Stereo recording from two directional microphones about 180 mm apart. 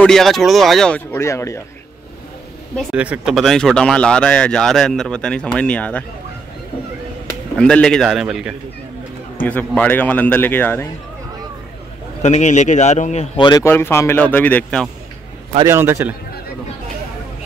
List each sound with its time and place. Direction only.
0.0 s speech: centre (ahead or behind)
2.8 s speech: 5° right (ahead or behind)
7.5 s speech: 5° left (ahead or behind)
9.4 s a man's voice: 10° left (ahead or behind)
12.2 s a man's voice: 40° left (ahead or behind)
13.4 s a man's voice: 20° left (ahead or behind)
15.6 s a man's voice: 15° right (ahead or behind)